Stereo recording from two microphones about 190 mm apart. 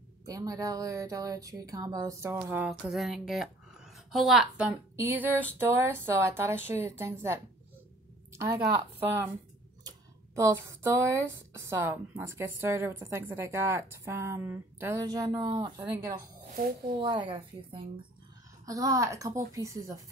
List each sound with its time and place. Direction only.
0.2 s speech: 20° right (ahead or behind)
2.3 s speech: 5° right (ahead or behind)
16.4 s a woman's voice: 45° right (ahead or behind)
17.0 s speech: 25° right (ahead or behind)
18.7 s speech: 15° right (ahead or behind)